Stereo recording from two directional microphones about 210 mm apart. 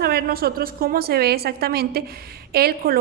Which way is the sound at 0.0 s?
50° right (ahead or behind).